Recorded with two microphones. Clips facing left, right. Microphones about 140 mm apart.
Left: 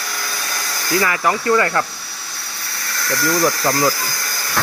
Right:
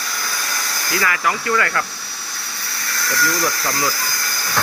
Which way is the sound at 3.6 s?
30° left (ahead or behind).